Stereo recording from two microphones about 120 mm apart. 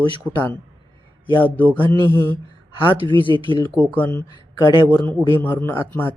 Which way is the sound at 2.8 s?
45° left (ahead or behind).